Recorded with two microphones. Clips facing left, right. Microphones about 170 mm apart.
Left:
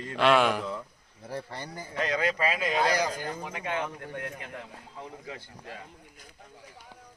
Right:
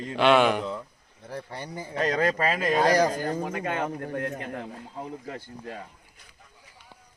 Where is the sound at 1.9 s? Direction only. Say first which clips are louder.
Right 4 dB; 40° right (ahead or behind).